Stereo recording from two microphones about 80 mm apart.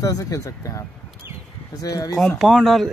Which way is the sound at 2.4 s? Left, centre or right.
Centre.